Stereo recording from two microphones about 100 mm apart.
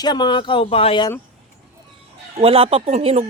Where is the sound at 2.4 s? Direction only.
70° right (ahead or behind).